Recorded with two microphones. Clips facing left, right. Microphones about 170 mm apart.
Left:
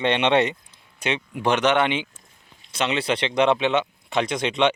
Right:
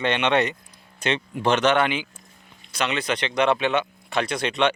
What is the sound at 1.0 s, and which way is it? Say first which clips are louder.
A man's voice: right 1 dB; 10° left (ahead or behind).